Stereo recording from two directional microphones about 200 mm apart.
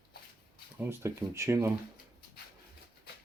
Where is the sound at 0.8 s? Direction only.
15° right (ahead or behind).